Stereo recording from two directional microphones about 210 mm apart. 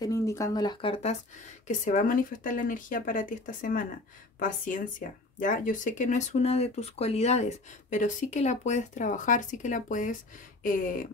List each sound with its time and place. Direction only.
0.0 s speech: 15° left (ahead or behind)
1.7 s speech: 40° left (ahead or behind)